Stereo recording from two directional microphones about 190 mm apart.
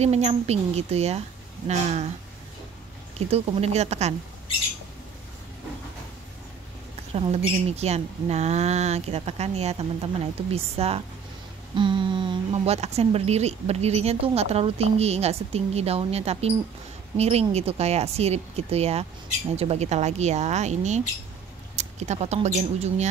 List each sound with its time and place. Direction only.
0.0 s speech: 35° right (ahead or behind)
3.2 s speech: 30° right (ahead or behind)
7.2 s speech: 35° right (ahead or behind)